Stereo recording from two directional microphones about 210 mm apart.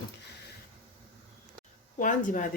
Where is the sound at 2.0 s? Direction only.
40° left (ahead or behind).